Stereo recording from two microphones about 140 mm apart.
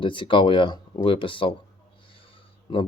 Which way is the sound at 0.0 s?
35° left (ahead or behind).